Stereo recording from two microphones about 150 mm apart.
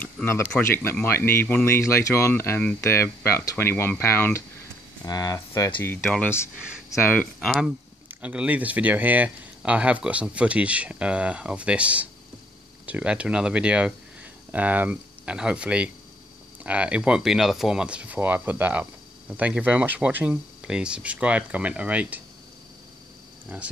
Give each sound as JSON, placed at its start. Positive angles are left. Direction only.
{"t": 0.0, "sound": "speech", "side_deg": 10}
{"t": 7.3, "sound": "speech", "side_deg": 0}
{"t": 23.5, "sound": "speech", "side_deg": -10}